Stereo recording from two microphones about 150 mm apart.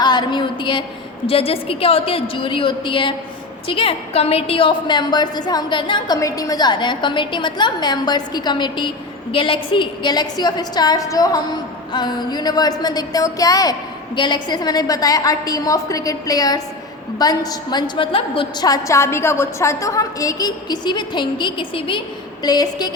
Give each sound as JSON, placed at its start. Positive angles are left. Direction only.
{"t": 0.0, "sound": "a sound", "side_deg": 30}
{"t": 1.3, "sound": "a woman's voice", "side_deg": 40}
{"t": 18.7, "sound": "a woman's voice", "side_deg": 20}